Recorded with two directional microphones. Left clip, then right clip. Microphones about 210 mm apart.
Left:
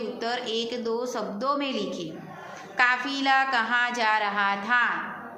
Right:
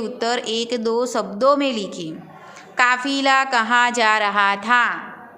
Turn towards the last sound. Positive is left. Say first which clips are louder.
# right 7 dB
turn(degrees=-55)  # may be behind; listen again after turning